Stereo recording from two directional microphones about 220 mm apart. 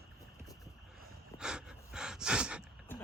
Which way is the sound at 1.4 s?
5° right (ahead or behind).